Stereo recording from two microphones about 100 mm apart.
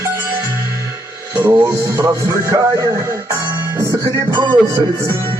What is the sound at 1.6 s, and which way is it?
Speech, 30° right (ahead or behind).